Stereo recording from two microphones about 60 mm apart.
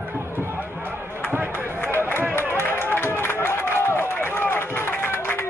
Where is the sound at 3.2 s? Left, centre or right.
Left.